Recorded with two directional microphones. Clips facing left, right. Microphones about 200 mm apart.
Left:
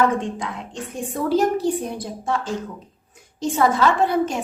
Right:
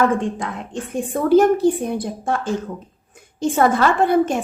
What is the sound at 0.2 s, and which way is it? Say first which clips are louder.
Speech: right 3 dB; 50° right (ahead or behind).